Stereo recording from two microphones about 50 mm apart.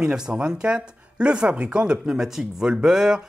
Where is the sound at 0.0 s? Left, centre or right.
Centre.